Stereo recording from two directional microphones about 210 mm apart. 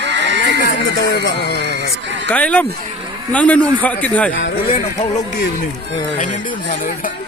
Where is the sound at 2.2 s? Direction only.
5° left (ahead or behind).